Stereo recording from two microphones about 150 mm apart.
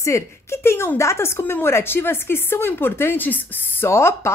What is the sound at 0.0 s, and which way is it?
Speech, 20° left (ahead or behind).